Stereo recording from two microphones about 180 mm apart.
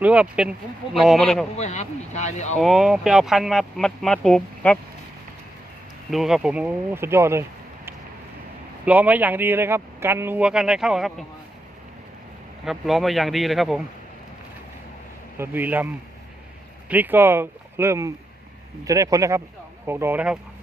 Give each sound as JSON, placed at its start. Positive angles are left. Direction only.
{"t": 0.0, "sound": "speech", "side_deg": -5}
{"t": 1.5, "sound": "speech", "side_deg": 40}
{"t": 2.6, "sound": "speech", "side_deg": 0}
{"t": 6.1, "sound": "speech", "side_deg": 0}
{"t": 8.8, "sound": "speech", "side_deg": -10}
{"t": 12.6, "sound": "speech", "side_deg": 0}
{"t": 15.4, "sound": "speech", "side_deg": -10}
{"t": 16.9, "sound": "speech", "side_deg": -10}